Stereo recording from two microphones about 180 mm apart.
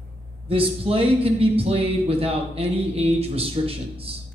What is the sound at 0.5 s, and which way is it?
Speech, 30° right (ahead or behind).